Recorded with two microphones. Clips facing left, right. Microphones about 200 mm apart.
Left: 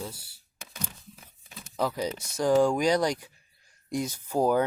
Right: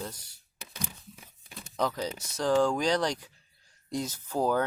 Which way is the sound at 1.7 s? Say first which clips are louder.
Left 2 dB; 10° left (ahead or behind).